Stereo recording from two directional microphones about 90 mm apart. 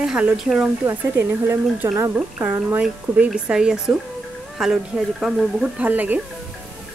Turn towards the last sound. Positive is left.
turn(degrees=-20)  # may be behind; listen again after turning